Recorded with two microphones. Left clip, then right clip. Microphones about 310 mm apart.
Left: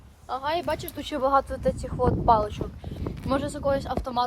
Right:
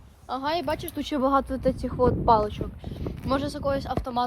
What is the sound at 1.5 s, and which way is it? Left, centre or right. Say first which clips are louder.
Speech: right 1 dB; right.